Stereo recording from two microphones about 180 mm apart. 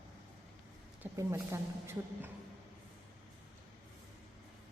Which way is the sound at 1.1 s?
15° right (ahead or behind).